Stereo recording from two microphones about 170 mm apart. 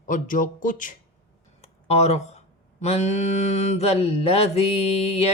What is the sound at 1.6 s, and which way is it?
Speech, 40° left (ahead or behind).